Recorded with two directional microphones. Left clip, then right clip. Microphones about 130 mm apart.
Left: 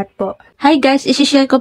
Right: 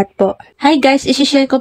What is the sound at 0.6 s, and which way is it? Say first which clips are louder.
Speech: even; centre (ahead or behind).